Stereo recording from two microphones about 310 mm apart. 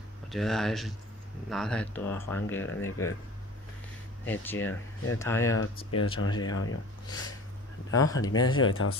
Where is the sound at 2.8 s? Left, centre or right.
Left.